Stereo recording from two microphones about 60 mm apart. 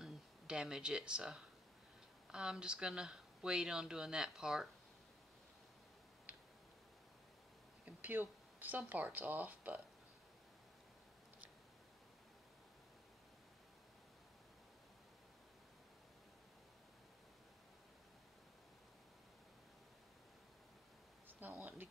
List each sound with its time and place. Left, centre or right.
0.0 s speech: centre
6.3 s tick-tock: right
7.8 s speech: right
21.3 s a sound: right